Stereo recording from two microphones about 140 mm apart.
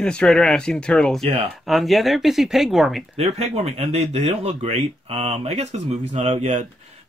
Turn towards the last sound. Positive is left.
turn(degrees=-55)  # may be behind; listen again after turning